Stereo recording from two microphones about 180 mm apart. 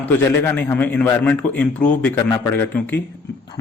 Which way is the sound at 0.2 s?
15° left (ahead or behind).